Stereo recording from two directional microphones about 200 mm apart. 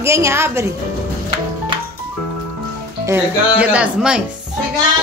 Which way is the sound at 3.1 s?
5° right (ahead or behind).